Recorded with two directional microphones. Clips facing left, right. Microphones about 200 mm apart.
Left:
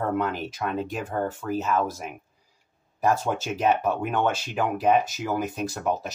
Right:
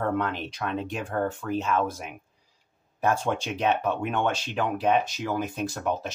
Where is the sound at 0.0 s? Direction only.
5° left (ahead or behind).